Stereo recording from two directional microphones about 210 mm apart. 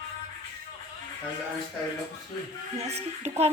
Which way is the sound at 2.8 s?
30° right (ahead or behind).